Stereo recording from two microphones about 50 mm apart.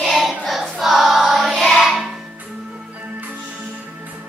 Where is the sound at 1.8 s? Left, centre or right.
Centre.